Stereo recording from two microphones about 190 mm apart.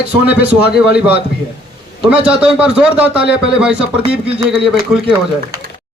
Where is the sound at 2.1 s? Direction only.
5° right (ahead or behind).